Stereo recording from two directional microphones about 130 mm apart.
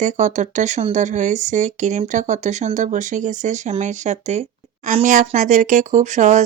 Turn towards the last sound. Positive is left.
turn(degrees=-65)  # may be behind; listen again after turning